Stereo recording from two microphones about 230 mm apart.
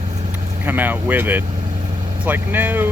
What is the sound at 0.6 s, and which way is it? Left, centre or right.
Speech, centre.